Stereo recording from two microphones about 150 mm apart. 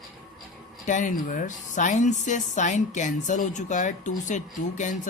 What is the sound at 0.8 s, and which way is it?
A woman's voice, 55° left (ahead or behind).